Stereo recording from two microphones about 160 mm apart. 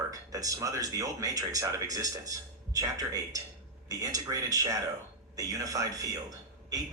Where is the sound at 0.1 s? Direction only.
20° right (ahead or behind).